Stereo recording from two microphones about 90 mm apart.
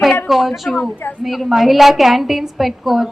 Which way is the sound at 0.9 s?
20° left (ahead or behind).